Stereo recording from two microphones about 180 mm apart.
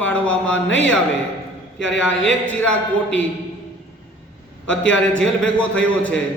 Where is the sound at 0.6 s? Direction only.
90° left.